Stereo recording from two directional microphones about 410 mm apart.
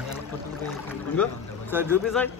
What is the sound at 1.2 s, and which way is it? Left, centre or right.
A man's voice, centre.